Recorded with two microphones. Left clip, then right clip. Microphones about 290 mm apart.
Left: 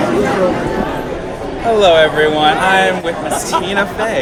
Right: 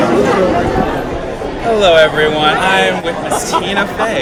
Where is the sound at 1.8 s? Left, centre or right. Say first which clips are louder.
Right 1 dB; centre.